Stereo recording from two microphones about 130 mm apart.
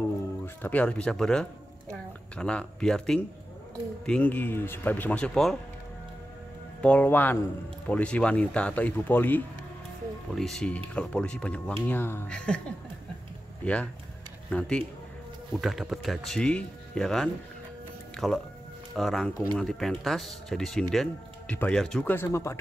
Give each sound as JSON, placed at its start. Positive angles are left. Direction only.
{"t": 0.6, "sound": "speech", "side_deg": 10}
{"t": 6.8, "sound": "speech", "side_deg": 10}
{"t": 10.3, "sound": "speech", "side_deg": 5}
{"t": 22.1, "sound": "speech", "side_deg": 20}